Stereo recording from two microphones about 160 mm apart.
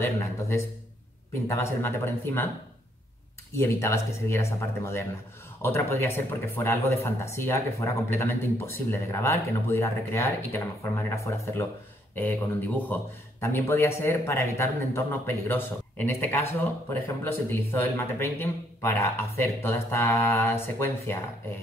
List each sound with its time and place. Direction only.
0.0 s speech: 15° left (ahead or behind)
3.5 s speech: 15° left (ahead or behind)